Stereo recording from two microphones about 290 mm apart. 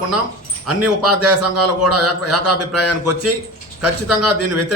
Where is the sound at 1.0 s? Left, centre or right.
Right.